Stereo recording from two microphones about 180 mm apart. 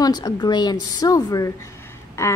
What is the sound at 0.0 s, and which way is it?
A woman's voice, 20° left (ahead or behind).